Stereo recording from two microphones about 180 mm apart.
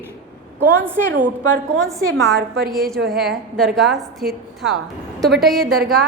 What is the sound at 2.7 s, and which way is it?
A woman's voice, centre (ahead or behind).